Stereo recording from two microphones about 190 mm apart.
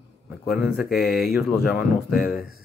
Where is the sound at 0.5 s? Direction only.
5° right (ahead or behind).